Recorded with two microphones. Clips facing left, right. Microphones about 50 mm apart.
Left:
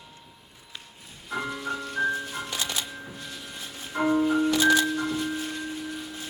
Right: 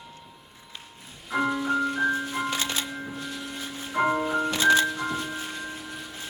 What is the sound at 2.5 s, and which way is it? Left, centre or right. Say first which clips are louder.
Music: right 3 dB; right.